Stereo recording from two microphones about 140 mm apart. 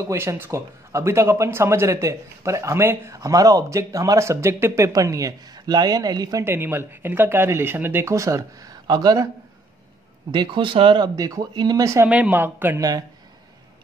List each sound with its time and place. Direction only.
0.0 s speech: 20° right (ahead or behind)
6.4 s speech: 15° right (ahead or behind)
10.3 s speech: 35° right (ahead or behind)
11.1 s speech: 25° right (ahead or behind)
12.1 s speech: 10° right (ahead or behind)